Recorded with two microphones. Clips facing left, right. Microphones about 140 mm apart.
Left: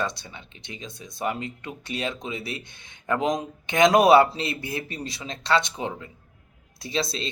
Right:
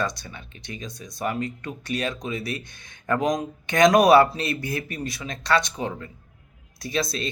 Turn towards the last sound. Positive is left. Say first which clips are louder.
# right 1 dB
turn(degrees=25)  # may be behind; listen again after turning